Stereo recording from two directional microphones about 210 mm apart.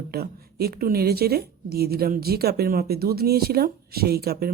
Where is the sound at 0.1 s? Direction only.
45° right (ahead or behind).